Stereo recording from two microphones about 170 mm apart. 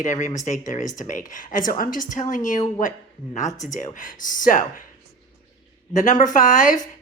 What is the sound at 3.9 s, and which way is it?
Speech, 50° left (ahead or behind).